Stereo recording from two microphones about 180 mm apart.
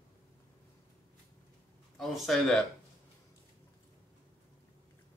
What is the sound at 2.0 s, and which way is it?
Speech, centre (ahead or behind).